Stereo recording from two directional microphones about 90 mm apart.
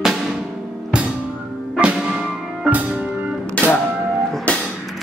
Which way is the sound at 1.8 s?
10° right (ahead or behind).